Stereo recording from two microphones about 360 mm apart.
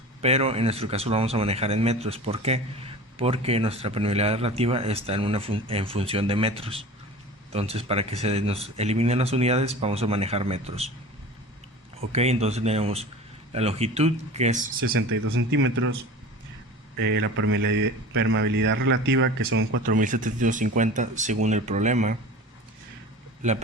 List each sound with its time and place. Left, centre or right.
0.2 s a man's voice: centre
12.1 s a man's voice: centre
14.9 s speech: right
17.2 s speech: right
19.8 s speech: right
23.4 s speech: centre